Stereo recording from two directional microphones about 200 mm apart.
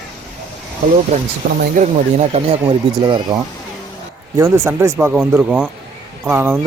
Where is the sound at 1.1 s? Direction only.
35° right (ahead or behind).